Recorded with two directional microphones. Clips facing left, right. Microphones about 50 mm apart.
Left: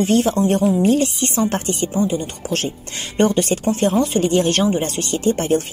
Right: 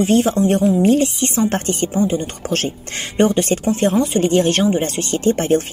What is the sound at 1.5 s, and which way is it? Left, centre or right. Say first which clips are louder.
Speech: right 2 dB; right.